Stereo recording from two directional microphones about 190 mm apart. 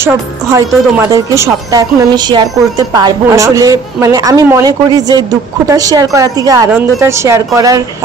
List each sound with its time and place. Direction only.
0.0 s a woman's voice: 15° right (ahead or behind)